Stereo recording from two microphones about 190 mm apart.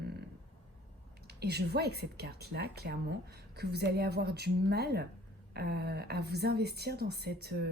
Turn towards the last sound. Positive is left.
turn(degrees=-55)  # may be behind; listen again after turning